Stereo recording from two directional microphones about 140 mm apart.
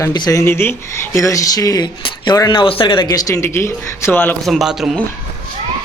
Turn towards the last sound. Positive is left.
turn(degrees=-5)  # may be behind; listen again after turning